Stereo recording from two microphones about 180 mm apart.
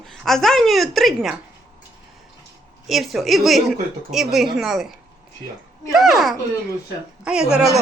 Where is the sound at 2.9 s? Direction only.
Centre (ahead or behind).